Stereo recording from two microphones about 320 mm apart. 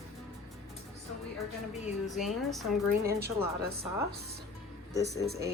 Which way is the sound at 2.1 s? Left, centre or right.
Centre.